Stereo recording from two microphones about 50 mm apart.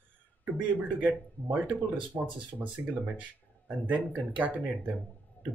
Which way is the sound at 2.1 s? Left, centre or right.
Right.